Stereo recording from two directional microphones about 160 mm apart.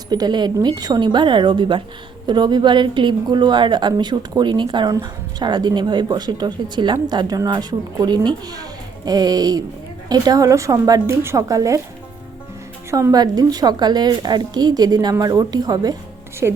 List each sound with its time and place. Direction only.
0.1 s speech: 25° right (ahead or behind)
12.9 s speech: 20° right (ahead or behind)